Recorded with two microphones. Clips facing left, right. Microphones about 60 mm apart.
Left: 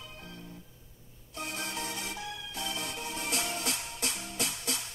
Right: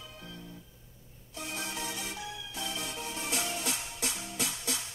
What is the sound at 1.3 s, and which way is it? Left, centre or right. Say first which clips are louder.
Music: left 1 dB; left.